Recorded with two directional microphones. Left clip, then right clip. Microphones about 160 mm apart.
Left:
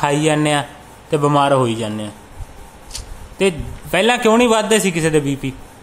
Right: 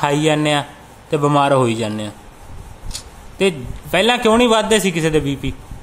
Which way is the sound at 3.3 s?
Centre (ahead or behind).